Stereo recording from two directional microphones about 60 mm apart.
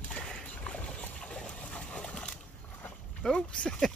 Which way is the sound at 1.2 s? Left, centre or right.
Centre.